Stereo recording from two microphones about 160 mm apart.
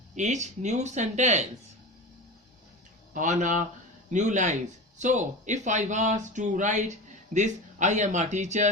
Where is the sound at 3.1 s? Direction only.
50° right (ahead or behind).